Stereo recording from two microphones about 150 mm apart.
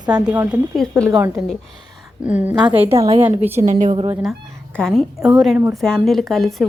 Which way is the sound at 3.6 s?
55° right (ahead or behind).